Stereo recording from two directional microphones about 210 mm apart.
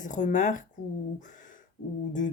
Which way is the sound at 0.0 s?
35° left (ahead or behind).